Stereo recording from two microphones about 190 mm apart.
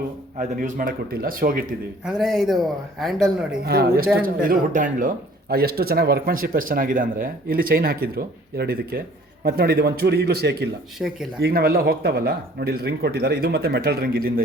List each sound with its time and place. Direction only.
0.3 s speech: 45° right (ahead or behind)
2.0 s speech: centre (ahead or behind)
3.6 s speech: 55° right (ahead or behind)
11.0 s speech: 5° right (ahead or behind)
11.3 s speech: 55° right (ahead or behind)